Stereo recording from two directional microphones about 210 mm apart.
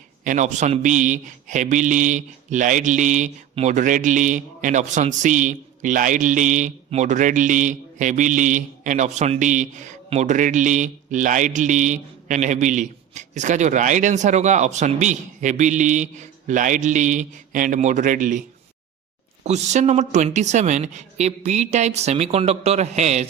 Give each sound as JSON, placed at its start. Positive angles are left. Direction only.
{"t": 0.3, "sound": "a man's voice", "side_deg": -35}
{"t": 19.5, "sound": "a man's voice", "side_deg": -35}